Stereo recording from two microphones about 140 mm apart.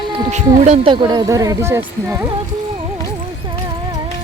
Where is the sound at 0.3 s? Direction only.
55° right (ahead or behind).